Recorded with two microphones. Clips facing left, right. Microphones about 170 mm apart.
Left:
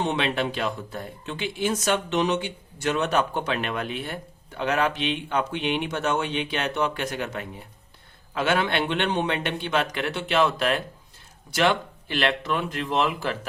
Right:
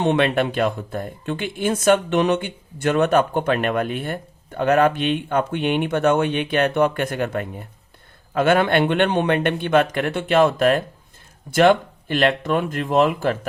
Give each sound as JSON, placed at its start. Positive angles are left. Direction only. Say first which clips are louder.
{"t": 0.0, "sound": "speech", "louder": "right 7 dB", "side_deg": -60}